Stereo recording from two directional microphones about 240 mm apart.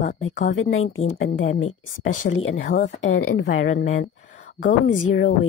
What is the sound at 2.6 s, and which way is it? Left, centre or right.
Speech, left.